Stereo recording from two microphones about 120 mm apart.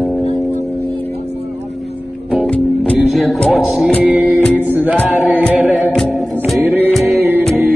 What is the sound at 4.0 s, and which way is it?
Music, 10° right (ahead or behind).